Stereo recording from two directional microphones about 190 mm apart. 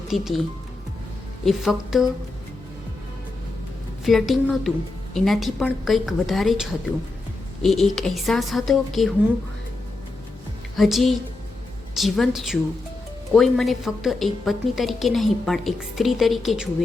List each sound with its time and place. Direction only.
0.1 s a woman's voice: centre (ahead or behind)
1.5 s a woman's voice: centre (ahead or behind)
4.0 s a woman's voice: centre (ahead or behind)
10.8 s a woman's voice: centre (ahead or behind)